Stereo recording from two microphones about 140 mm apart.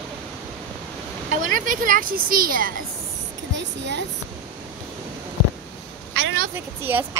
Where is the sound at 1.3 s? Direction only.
75° right (ahead or behind); by 2.7 s 90° right.